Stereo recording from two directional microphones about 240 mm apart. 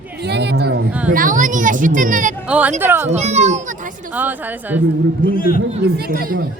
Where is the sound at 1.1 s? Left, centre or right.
Right.